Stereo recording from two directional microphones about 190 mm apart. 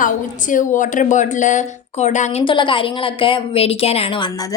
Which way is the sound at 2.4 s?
25° left (ahead or behind).